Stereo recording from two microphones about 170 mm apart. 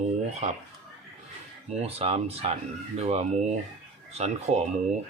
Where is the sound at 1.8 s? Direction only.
35° right (ahead or behind).